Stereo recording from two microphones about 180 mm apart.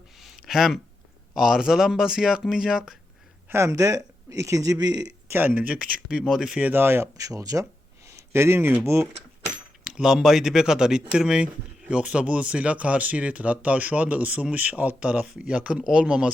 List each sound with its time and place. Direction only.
0.2 s a sound: centre (ahead or behind)
1.4 s speech: 5° right (ahead or behind)
3.5 s speech: 15° right (ahead or behind)
5.3 s speech: 10° right (ahead or behind)
8.0 s a sound: 15° right (ahead or behind)
9.8 s speech: 5° right (ahead or behind)